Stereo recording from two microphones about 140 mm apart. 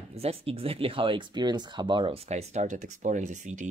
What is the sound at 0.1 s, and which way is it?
Speech, 45° right (ahead or behind).